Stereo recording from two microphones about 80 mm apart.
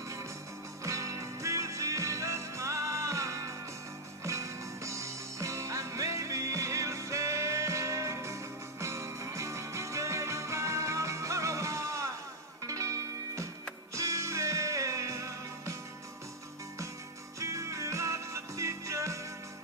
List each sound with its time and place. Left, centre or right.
0.8 s music: right
13.9 s music: right
17.4 s music: right